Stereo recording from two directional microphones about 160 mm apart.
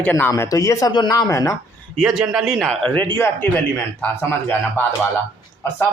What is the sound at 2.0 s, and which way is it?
Speech, centre (ahead or behind).